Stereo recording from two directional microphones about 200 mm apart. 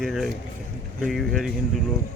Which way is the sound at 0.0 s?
Centre (ahead or behind).